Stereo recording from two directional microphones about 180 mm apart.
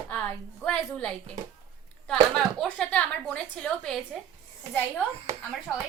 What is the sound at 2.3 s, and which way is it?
A woman's voice, 5° left (ahead or behind).